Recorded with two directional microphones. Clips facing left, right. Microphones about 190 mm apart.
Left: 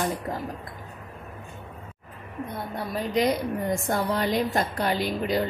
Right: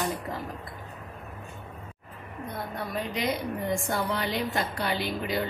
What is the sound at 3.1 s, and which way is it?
A woman's voice, 45° left (ahead or behind).